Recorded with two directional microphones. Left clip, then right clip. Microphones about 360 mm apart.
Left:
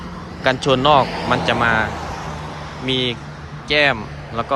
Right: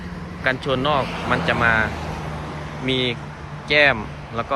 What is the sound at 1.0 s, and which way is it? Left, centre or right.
Speech, left.